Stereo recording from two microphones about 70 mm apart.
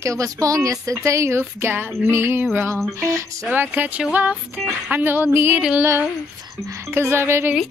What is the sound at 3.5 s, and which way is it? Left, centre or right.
Music, right.